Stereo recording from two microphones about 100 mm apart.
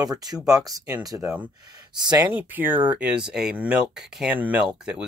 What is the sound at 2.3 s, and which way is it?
Speech, 15° right (ahead or behind).